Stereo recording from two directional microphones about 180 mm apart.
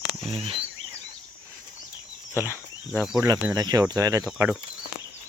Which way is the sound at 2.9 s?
Centre (ahead or behind).